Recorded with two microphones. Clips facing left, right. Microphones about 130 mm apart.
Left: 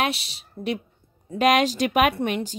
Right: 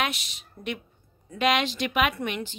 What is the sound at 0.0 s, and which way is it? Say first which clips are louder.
A woman's voice: left 4 dB; 30° left (ahead or behind).